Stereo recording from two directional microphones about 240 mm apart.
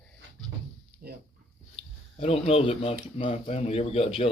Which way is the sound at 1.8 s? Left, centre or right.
Left.